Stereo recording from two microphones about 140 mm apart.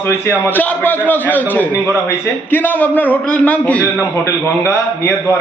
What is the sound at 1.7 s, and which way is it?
Speech, 20° right (ahead or behind).